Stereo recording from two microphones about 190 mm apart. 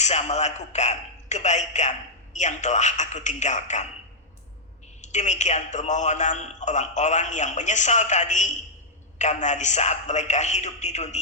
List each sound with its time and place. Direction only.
0.0 s a man's voice: 35° left (ahead or behind)
4.9 s a man's voice: 40° left (ahead or behind)